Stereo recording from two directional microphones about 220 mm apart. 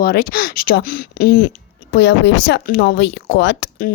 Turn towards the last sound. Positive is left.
turn(degrees=50)  # may be behind; listen again after turning